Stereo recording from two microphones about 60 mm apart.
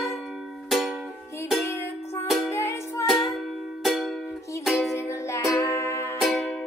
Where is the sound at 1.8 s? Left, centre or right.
Left.